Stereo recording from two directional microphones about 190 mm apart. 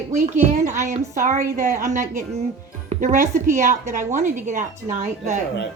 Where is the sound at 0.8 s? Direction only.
40° right (ahead or behind).